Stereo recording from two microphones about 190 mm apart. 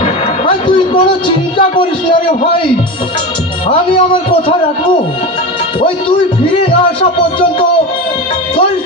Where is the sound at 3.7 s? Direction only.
30° left (ahead or behind).